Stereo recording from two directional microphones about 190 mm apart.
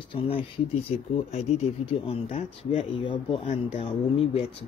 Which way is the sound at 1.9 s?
30° left (ahead or behind).